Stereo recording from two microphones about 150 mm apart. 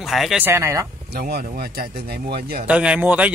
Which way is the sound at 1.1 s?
90° right.